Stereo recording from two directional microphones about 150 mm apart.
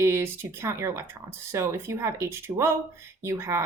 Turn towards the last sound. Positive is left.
turn(degrees=-15)  # may be behind; listen again after turning